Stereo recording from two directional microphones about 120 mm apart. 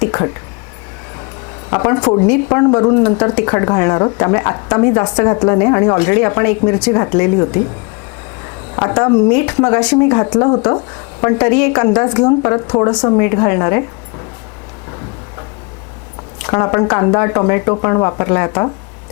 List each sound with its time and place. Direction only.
0.0 s a woman's voice: 25° left (ahead or behind)
1.7 s a woman's voice: 25° left (ahead or behind)
16.4 s a woman's voice: 25° left (ahead or behind)